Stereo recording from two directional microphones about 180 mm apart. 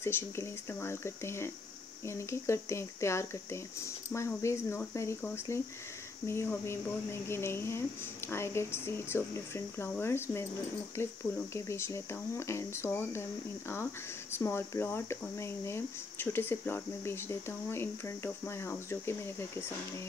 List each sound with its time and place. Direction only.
0.0 s speech: 15° left (ahead or behind)
14.3 s speech: 15° left (ahead or behind)